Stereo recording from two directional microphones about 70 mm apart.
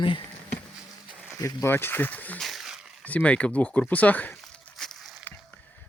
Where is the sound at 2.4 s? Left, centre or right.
Centre.